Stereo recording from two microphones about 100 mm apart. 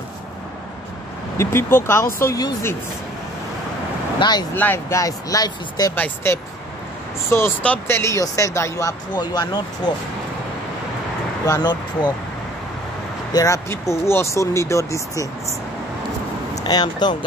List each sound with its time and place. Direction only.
1.4 s speech: 25° left (ahead or behind)
4.2 s speech: 45° left (ahead or behind)
4.6 s speech: 20° left (ahead or behind); by 5.9 s 40° left (ahead or behind)
5.9 s speech: 15° left (ahead or behind)
7.6 s speech: 15° left (ahead or behind)
8.0 s speech: 30° left (ahead or behind)
9.1 s speech: 45° left (ahead or behind)
11.4 s speech: 45° left (ahead or behind)
13.3 s speech: 35° left (ahead or behind)
16.6 s speech: 45° left (ahead or behind)